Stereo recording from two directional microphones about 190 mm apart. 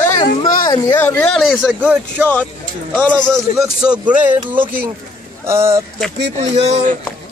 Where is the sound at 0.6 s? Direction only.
20° left (ahead or behind).